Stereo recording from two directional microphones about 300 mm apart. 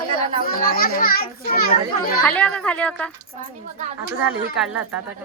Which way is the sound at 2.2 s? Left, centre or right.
Centre.